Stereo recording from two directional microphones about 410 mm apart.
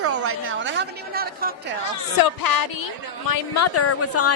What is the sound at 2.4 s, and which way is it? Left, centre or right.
Speech, left.